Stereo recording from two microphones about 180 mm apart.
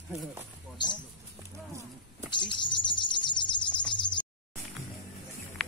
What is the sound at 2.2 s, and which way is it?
Bird, 25° left (ahead or behind).